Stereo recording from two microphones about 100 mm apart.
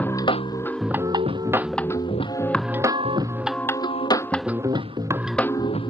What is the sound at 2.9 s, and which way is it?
Organ, 55° right (ahead or behind).